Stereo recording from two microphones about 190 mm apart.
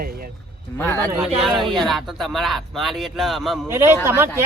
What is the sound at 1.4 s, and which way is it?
Speech, centre (ahead or behind).